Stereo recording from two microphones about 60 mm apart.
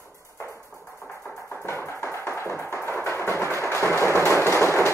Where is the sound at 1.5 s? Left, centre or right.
Left.